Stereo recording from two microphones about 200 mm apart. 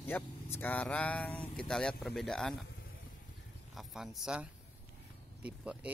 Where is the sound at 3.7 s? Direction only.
Centre (ahead or behind).